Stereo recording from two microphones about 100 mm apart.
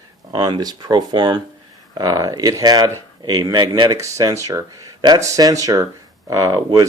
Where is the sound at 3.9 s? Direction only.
30° right (ahead or behind).